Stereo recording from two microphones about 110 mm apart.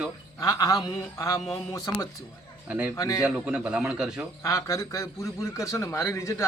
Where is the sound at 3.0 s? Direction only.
30° left (ahead or behind).